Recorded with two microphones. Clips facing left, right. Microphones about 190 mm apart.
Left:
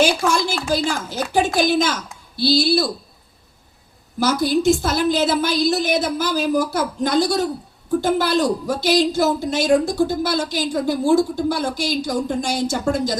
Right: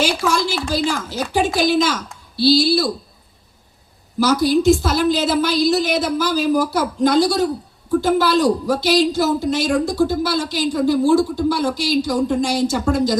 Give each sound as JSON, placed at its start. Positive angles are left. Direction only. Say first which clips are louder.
{"t": 0.0, "sound": "a woman's voice", "louder": "left 1 dB", "side_deg": 50}
{"t": 4.2, "sound": "a woman's voice", "louder": "right 3 dB", "side_deg": 55}